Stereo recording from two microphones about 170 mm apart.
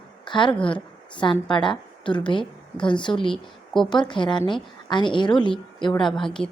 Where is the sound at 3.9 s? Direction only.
25° left (ahead or behind).